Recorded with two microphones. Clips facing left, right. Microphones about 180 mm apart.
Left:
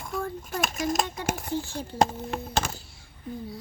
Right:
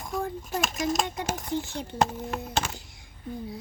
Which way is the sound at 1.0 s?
20° right (ahead or behind).